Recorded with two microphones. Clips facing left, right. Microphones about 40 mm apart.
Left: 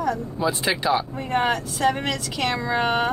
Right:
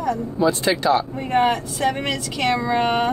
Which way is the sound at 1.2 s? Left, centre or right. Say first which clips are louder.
Right 3 dB; centre.